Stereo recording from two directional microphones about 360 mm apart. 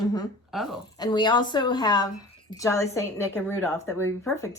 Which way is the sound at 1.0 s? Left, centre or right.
Centre.